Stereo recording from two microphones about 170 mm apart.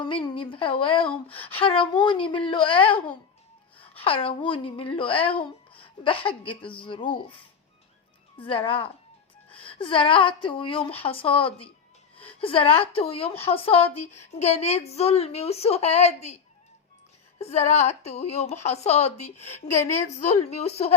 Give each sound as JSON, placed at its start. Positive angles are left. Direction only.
{"t": 0.0, "sound": "a woman's voice", "side_deg": 30}
{"t": 8.4, "sound": "a woman's voice", "side_deg": 30}
{"t": 17.3, "sound": "a woman's voice", "side_deg": 40}